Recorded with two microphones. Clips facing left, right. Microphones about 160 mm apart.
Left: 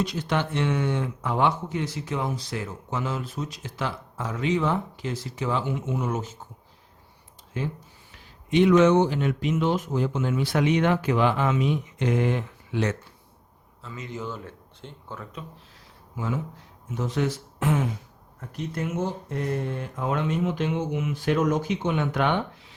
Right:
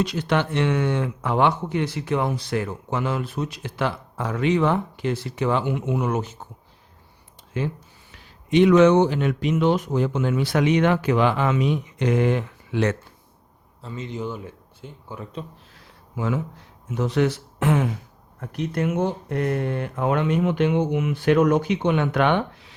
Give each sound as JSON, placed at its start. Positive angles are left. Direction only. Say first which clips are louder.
{"t": 0.0, "sound": "speech", "louder": "right 4 dB", "side_deg": -75}
{"t": 7.6, "sound": "speech", "louder": "right 4 dB", "side_deg": -75}
{"t": 13.8, "sound": "a man's voice", "louder": "right 4 dB", "side_deg": -30}
{"t": 14.2, "sound": "speech", "louder": "right 2 dB", "side_deg": -15}
{"t": 15.2, "sound": "a man's voice", "louder": "right 8 dB", "side_deg": -30}
{"t": 16.1, "sound": "speech", "louder": "right 4 dB", "side_deg": -75}